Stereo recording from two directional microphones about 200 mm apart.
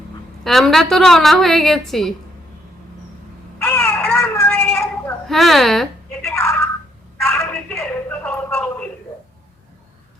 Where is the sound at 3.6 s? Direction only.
10° left (ahead or behind).